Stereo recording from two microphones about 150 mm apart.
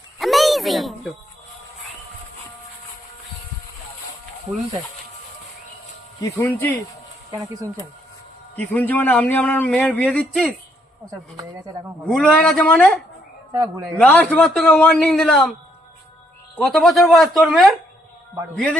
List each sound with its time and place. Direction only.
0.2 s a sound: centre (ahead or behind)
6.1 s speech: 20° left (ahead or behind)
8.5 s speech: 10° left (ahead or behind)
12.0 s speech: 5° left (ahead or behind)
13.5 s speech: 20° right (ahead or behind)
14.0 s speech: 10° left (ahead or behind)
16.6 s speech: centre (ahead or behind)